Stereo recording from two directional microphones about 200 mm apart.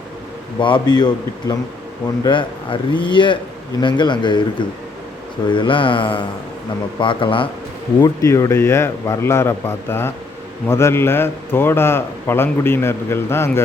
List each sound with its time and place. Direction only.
0.6 s speech: 20° left (ahead or behind)
5.5 s a man's voice: 25° left (ahead or behind)